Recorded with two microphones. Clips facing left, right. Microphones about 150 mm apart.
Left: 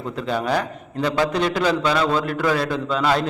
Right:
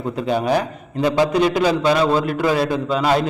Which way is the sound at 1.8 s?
25° right (ahead or behind).